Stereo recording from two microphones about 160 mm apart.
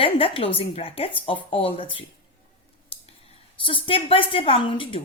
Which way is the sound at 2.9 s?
35° left (ahead or behind).